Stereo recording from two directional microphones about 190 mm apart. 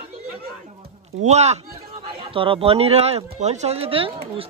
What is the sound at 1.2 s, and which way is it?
Speech, 35° right (ahead or behind).